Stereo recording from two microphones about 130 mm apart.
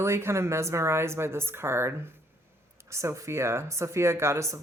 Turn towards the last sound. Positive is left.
turn(degrees=-20)  # may be behind; listen again after turning